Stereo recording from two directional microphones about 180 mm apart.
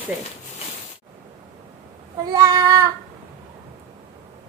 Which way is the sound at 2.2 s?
20° right (ahead or behind).